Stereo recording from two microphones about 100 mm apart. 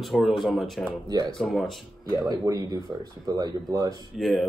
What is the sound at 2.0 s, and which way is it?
Speech, 35° right (ahead or behind).